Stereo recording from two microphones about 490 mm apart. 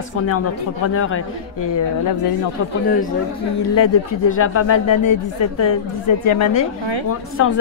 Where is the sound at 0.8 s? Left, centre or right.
Left.